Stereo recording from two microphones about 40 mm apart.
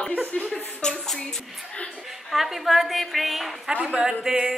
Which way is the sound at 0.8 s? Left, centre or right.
Centre.